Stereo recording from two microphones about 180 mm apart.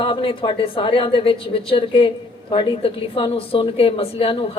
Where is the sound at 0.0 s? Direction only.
30° left (ahead or behind).